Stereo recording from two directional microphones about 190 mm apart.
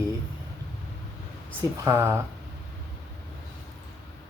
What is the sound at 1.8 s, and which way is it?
Speech, 15° right (ahead or behind).